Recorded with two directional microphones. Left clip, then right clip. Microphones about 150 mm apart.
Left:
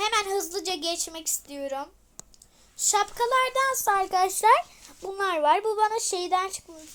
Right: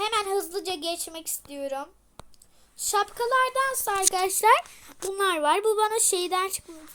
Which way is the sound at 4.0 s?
25° right (ahead or behind).